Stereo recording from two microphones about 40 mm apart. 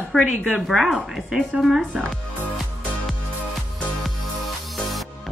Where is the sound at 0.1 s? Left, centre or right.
Centre.